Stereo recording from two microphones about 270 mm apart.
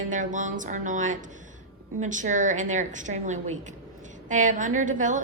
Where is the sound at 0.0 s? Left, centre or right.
Right.